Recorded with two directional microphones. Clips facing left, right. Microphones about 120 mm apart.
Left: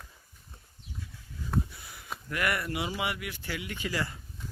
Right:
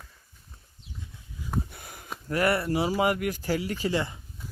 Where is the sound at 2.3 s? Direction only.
35° right (ahead or behind).